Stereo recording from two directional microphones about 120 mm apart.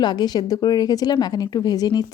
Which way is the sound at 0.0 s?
35° left (ahead or behind).